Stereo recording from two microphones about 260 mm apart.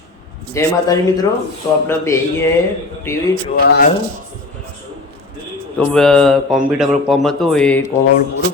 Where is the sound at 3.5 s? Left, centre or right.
Left.